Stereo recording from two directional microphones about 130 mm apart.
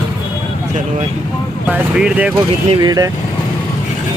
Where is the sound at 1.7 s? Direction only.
10° right (ahead or behind).